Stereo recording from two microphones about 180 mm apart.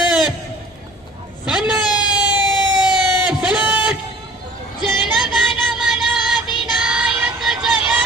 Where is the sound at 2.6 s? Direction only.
25° left (ahead or behind).